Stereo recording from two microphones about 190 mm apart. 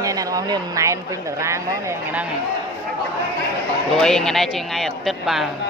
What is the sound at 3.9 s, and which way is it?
A man's voice, centre (ahead or behind).